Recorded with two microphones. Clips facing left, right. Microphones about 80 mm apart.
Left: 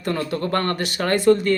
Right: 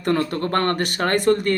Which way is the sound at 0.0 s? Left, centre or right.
Right.